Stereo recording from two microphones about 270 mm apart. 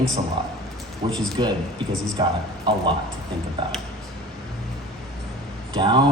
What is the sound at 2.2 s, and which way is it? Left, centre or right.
Speech, centre.